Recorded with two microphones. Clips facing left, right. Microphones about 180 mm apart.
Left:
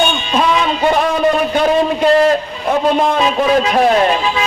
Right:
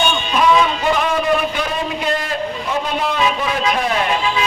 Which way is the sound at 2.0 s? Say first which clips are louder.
Left 10 dB; 45° left (ahead or behind).